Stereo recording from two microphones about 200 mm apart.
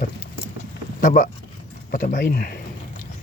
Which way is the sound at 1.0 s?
45° left (ahead or behind).